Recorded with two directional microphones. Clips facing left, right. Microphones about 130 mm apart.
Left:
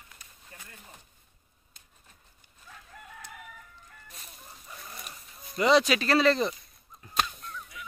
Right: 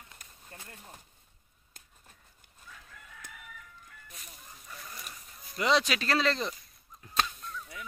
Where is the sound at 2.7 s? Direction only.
45° left (ahead or behind).